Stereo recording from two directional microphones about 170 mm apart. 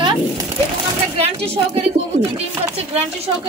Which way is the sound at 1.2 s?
35° right (ahead or behind).